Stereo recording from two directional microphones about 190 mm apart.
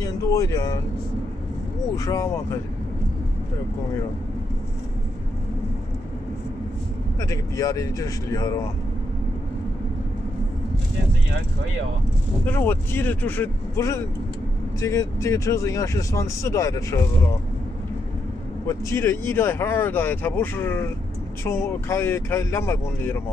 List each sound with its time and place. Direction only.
0.0 s speech: 15° left (ahead or behind)
2.0 s speech: 15° left (ahead or behind)
7.2 s speech: 15° left (ahead or behind)
12.4 s speech: 10° left (ahead or behind)
18.7 s speech: 15° left (ahead or behind)